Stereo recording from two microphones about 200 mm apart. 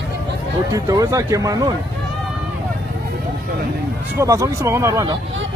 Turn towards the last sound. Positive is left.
turn(degrees=-15)  # may be behind; listen again after turning